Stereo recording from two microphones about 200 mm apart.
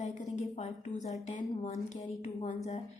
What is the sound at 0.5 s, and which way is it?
Speech, 35° left (ahead or behind).